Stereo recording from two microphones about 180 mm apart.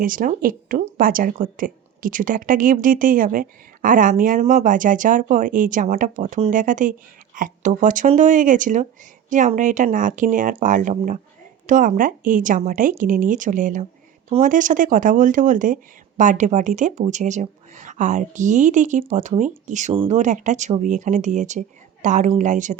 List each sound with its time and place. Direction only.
0.0 s a woman's voice: 50° right (ahead or behind)